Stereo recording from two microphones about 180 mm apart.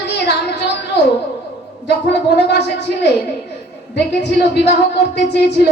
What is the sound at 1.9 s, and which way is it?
Speech, 70° left (ahead or behind).